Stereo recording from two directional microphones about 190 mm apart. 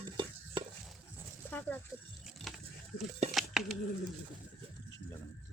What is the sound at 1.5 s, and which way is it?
Speech, 10° left (ahead or behind).